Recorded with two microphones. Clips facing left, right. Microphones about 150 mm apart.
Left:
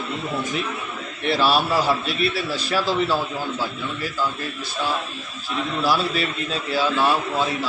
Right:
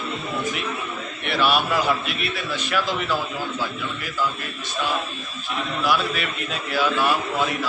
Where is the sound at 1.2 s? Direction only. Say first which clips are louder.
Left 2 dB; 30° left (ahead or behind).